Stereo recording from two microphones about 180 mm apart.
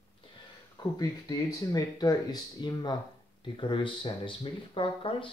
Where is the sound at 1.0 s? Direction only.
20° left (ahead or behind).